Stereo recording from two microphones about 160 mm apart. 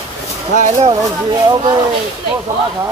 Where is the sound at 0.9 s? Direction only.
25° right (ahead or behind).